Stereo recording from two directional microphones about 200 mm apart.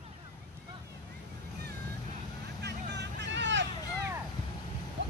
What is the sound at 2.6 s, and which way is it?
Vehicle, 55° right (ahead or behind).